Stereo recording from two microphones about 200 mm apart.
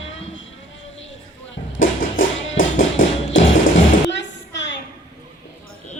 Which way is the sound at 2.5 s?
75° left (ahead or behind).